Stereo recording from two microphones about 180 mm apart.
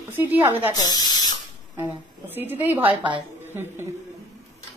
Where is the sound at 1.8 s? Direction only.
10° right (ahead or behind).